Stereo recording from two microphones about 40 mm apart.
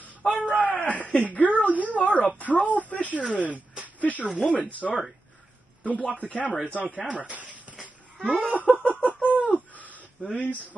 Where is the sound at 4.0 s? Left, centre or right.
Left.